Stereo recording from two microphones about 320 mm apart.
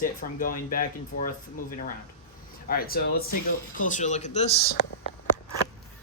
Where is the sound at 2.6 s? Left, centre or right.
Left.